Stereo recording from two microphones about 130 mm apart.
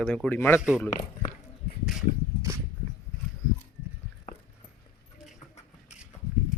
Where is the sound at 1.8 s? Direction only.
5° right (ahead or behind).